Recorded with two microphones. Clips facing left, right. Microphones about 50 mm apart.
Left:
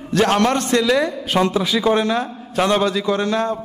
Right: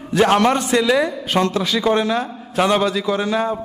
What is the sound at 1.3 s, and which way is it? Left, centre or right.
A man's voice, centre.